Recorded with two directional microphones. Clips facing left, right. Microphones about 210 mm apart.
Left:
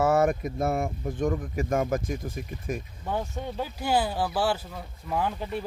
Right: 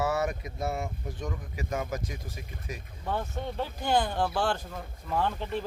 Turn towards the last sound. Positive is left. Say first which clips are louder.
# left 1 dB
turn(degrees=10)  # may be behind; listen again after turning